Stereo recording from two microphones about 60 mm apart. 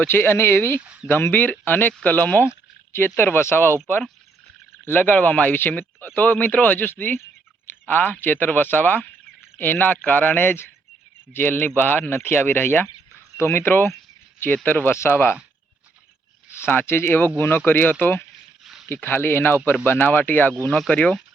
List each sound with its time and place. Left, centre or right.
0.1 s speech: left
2.9 s speech: left
4.9 s speech: left
14.9 s speech: left
16.6 s speech: left
18.6 s a sound: centre
19.0 s speech: left
20.5 s speech: centre